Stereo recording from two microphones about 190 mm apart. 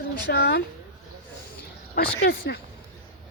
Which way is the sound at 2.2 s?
55° left (ahead or behind).